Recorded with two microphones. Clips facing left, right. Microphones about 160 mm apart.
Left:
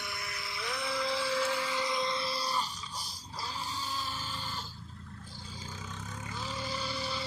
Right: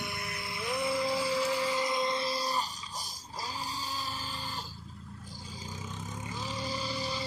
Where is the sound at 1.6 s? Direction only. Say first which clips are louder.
Right 3 dB; 45° right (ahead or behind).